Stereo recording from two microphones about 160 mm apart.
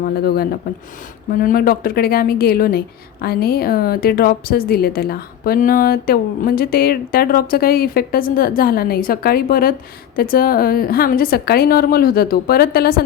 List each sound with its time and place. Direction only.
0.0 s a woman's voice: 75° left (ahead or behind)